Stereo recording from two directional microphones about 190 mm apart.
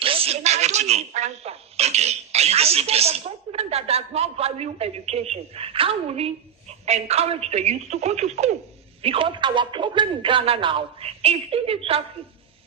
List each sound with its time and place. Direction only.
0.0 s speech: 30° right (ahead or behind)